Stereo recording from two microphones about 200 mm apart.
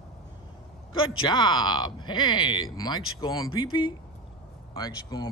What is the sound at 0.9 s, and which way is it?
Speech, 25° left (ahead or behind).